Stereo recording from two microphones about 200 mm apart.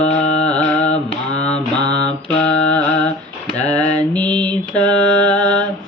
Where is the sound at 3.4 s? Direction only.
35° left (ahead or behind).